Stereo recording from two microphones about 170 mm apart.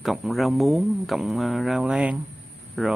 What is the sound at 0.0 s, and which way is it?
A man's voice, centre (ahead or behind).